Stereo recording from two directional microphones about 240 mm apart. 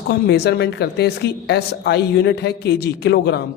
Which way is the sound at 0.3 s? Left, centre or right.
Left.